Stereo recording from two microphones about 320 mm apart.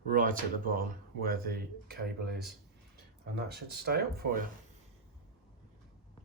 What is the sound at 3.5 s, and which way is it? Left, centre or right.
Speech, right.